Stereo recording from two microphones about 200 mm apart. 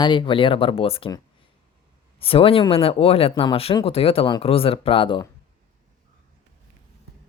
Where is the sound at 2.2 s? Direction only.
30° left (ahead or behind).